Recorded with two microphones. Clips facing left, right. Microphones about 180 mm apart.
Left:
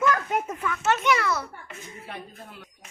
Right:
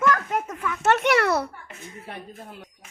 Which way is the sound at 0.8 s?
65° right (ahead or behind).